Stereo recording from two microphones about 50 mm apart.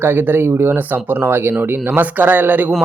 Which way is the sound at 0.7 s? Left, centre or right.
Right.